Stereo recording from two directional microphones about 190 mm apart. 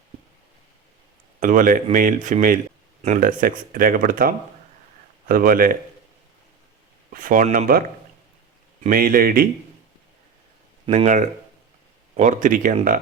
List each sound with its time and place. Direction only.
1.4 s speech: 45° right (ahead or behind)
7.1 s speech: 45° right (ahead or behind)
10.8 s speech: 35° right (ahead or behind)